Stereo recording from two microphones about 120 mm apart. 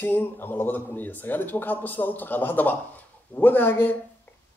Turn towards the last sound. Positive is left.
turn(degrees=20)  # may be behind; listen again after turning